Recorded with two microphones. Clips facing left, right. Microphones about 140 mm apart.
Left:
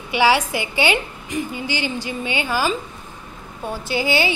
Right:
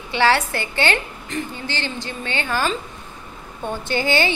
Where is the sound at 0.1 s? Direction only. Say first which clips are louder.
Left 1 dB; 10° left (ahead or behind).